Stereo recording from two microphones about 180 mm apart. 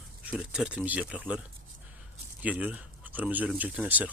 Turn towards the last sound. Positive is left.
turn(degrees=-10)  # may be behind; listen again after turning